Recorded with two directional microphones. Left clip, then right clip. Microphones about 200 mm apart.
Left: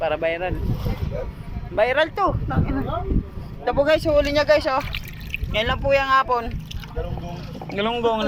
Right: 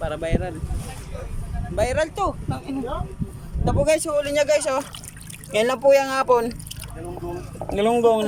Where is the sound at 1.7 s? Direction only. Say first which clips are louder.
Left 3 dB; 10° right (ahead or behind).